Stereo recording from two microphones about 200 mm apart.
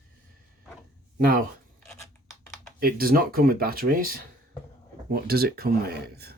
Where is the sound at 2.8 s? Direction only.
45° right (ahead or behind).